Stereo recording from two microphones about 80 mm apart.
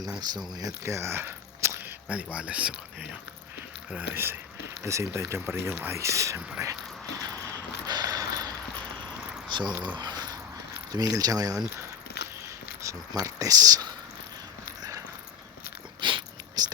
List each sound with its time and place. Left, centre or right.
0.2 s speech: right
0.9 s a sound: right
2.0 s speech: centre
4.8 s speech: right
7.9 s a sound: right
9.5 s speech: right
10.0 s dog: right
10.9 s speech: right
12.8 s speech: right
14.8 s a sound: right
16.0 s biting: right
16.6 s a sound: right